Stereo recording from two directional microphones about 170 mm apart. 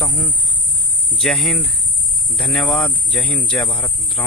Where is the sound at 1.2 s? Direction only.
Centre (ahead or behind).